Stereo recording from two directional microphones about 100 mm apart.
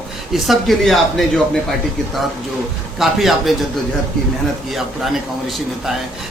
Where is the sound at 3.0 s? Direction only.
Centre (ahead or behind).